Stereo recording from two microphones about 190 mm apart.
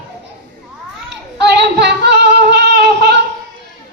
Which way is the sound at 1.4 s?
60° right (ahead or behind).